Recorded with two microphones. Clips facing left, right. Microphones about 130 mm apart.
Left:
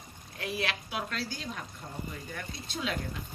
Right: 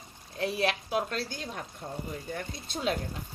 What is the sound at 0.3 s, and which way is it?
A woman's voice, 35° right (ahead or behind).